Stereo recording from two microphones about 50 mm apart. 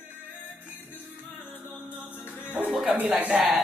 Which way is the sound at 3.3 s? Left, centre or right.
Right.